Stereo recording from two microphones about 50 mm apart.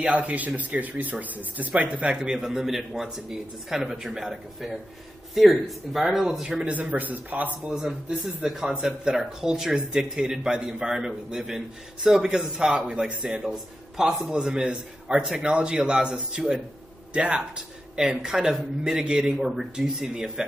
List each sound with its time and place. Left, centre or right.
0.0 s speech: right; by 6.6 s centre
6.6 s speech: right
8.5 s speech: centre
14.3 s speech: centre